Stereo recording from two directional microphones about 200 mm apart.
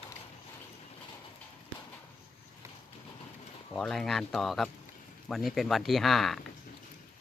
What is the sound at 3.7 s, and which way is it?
Speech, centre (ahead or behind).